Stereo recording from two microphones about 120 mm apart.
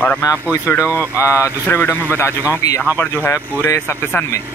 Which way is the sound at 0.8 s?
15° right (ahead or behind).